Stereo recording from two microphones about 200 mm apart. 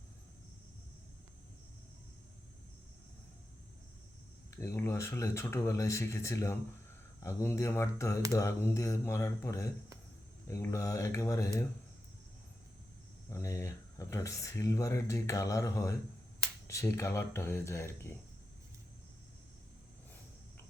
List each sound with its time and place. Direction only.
4.5 s speech: 15° left (ahead or behind)
13.3 s speech: 15° left (ahead or behind)